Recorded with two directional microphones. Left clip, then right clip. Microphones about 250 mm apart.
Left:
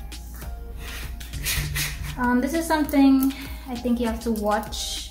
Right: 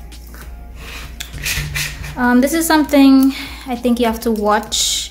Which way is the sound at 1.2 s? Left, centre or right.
Right.